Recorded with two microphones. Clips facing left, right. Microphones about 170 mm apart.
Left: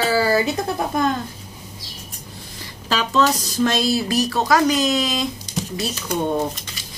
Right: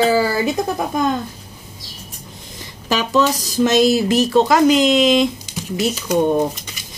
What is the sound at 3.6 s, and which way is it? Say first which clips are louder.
Speech: right 6 dB; 20° right (ahead or behind).